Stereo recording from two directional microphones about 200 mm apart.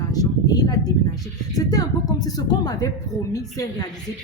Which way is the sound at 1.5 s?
20° left (ahead or behind).